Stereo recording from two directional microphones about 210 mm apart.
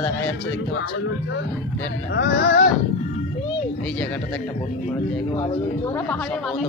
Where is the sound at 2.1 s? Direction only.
50° left (ahead or behind).